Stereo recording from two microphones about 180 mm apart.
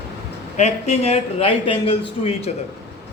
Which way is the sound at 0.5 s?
40° left (ahead or behind).